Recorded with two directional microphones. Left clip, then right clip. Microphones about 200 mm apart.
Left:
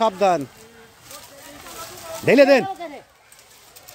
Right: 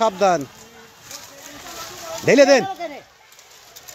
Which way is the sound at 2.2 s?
10° left (ahead or behind).